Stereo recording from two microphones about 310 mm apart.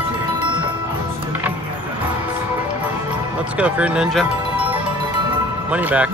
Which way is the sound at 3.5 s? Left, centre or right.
Centre.